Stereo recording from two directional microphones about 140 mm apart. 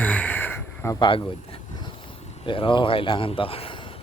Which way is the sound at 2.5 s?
35° left (ahead or behind).